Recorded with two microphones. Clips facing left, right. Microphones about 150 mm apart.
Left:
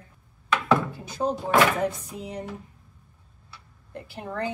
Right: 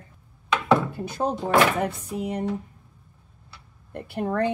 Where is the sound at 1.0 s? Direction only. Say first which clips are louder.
Right 1 dB; 60° right (ahead or behind).